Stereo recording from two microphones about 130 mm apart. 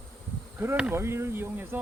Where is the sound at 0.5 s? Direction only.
20° right (ahead or behind).